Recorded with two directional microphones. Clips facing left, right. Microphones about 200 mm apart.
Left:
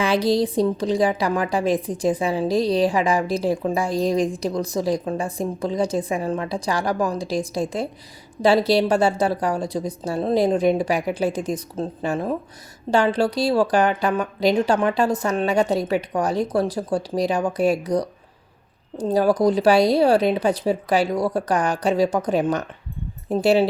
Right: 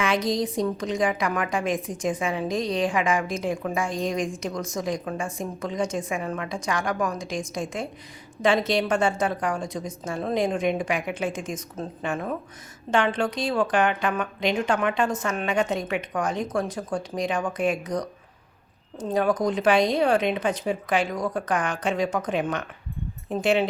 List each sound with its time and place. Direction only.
0.0 s a woman's voice: 30° left (ahead or behind)